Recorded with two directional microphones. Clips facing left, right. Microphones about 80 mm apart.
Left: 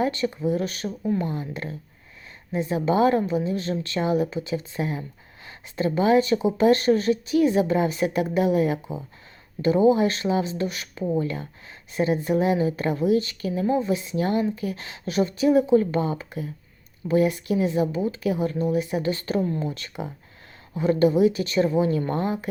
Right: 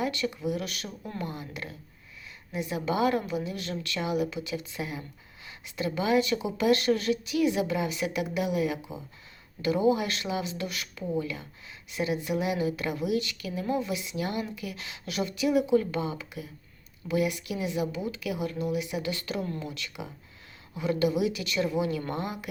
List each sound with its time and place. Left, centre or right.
0.0 s a woman's voice: left
11.0 s a woman's voice: left